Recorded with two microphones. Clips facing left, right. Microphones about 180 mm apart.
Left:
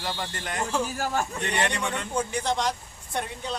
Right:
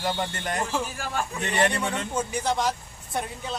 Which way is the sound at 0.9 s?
45° left (ahead or behind).